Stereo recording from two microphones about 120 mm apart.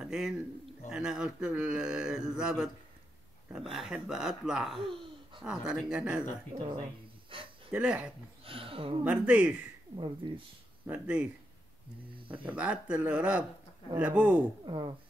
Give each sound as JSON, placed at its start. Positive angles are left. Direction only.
{"t": 0.0, "sound": "a sound", "side_deg": -5}
{"t": 0.8, "sound": "speech", "side_deg": -5}
{"t": 6.5, "sound": "speech", "side_deg": -45}
{"t": 7.7, "sound": "speech", "side_deg": -10}
{"t": 8.5, "sound": "speech", "side_deg": -50}
{"t": 9.0, "sound": "speech", "side_deg": -10}
{"t": 9.9, "sound": "speech", "side_deg": -45}
{"t": 10.9, "sound": "speech", "side_deg": -10}
{"t": 12.3, "sound": "speech", "side_deg": -10}
{"t": 14.6, "sound": "speech", "side_deg": -40}